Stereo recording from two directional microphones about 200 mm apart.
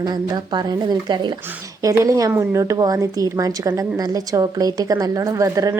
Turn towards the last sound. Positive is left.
turn(degrees=-15)  # may be behind; listen again after turning